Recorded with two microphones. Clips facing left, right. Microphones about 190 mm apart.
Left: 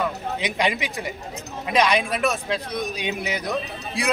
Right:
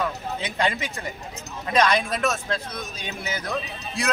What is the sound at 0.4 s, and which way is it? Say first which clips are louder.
A man's voice: left 2 dB; 15° left (ahead or behind).